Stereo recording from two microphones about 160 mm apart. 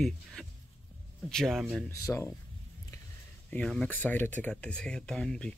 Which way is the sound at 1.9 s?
20° left (ahead or behind).